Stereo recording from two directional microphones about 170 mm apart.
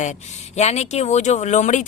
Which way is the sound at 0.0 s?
45° left (ahead or behind).